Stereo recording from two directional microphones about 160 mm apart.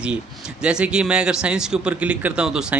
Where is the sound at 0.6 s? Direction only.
5° right (ahead or behind).